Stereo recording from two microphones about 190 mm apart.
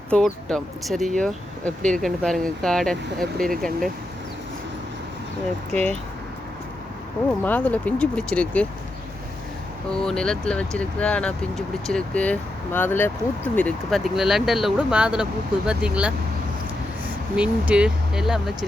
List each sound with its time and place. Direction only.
0.1 s speech: 5° left (ahead or behind)
5.7 s speech: 35° right (ahead or behind)
7.4 s speech: 10° left (ahead or behind)
9.9 s speech: 5° left (ahead or behind)
17.3 s speech: 5° right (ahead or behind)